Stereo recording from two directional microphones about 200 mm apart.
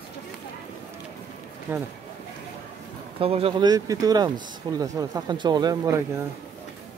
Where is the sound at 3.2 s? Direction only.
30° right (ahead or behind).